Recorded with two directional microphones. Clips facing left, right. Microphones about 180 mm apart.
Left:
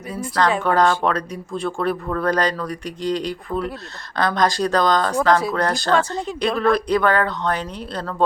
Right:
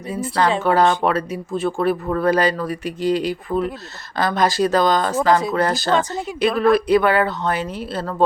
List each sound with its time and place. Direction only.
0.1 s speech: 5° right (ahead or behind)
5.9 s speech: 20° right (ahead or behind)
6.1 s speech: 5° right (ahead or behind)